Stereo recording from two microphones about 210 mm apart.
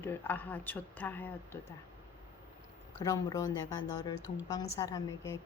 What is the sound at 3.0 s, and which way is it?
Speech, 15° left (ahead or behind).